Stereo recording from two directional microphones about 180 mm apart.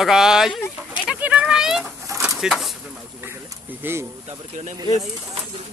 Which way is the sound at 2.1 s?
15° right (ahead or behind).